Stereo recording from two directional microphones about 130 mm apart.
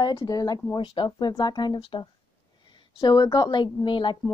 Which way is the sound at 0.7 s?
40° left (ahead or behind).